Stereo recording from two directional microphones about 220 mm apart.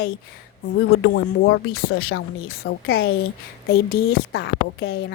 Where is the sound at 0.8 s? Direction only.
60° left (ahead or behind).